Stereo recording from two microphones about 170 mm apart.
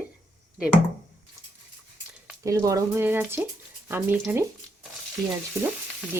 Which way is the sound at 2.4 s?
20° right (ahead or behind).